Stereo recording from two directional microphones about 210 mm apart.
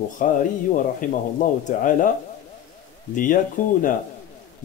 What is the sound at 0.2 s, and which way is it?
Speech, 40° left (ahead or behind).